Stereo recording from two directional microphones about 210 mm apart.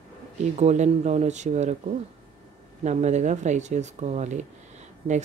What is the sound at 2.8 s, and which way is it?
Speech, 35° right (ahead or behind).